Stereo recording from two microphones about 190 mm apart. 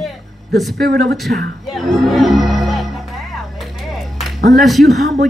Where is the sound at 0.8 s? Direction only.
55° right (ahead or behind).